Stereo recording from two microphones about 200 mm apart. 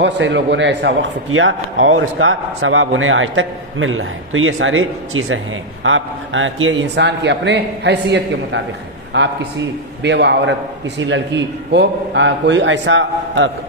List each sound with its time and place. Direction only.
0.0 s a man's voice: 60° right (ahead or behind)